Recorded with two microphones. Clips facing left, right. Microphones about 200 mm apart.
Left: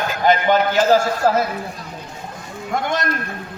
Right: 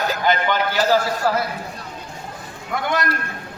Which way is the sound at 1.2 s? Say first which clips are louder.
Left 5 dB; 45° left (ahead or behind).